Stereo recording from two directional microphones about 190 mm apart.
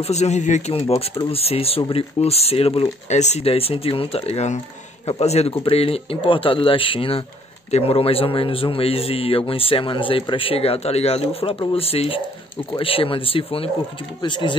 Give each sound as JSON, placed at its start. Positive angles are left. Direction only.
{"t": 0.0, "sound": "a man's voice", "side_deg": 35}